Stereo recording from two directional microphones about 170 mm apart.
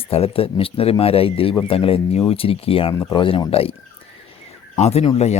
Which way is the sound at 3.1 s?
30° left (ahead or behind).